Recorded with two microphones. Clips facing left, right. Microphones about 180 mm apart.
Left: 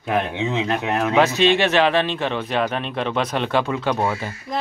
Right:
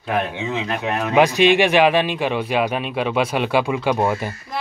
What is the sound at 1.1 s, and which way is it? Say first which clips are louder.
Speech: right 3 dB; 15° right (ahead or behind).